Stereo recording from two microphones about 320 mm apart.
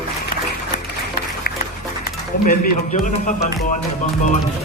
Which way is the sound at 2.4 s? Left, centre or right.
Left.